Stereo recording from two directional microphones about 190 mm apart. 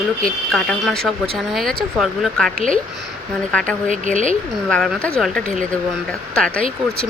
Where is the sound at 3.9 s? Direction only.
40° right (ahead or behind).